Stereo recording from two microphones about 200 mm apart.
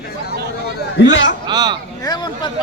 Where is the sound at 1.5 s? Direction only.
20° right (ahead or behind).